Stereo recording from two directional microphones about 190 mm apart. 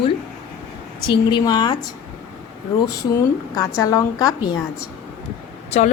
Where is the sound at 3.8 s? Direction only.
20° left (ahead or behind).